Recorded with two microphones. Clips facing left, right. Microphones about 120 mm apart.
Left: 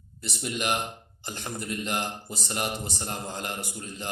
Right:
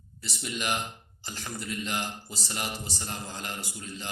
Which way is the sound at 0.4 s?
55° left (ahead or behind).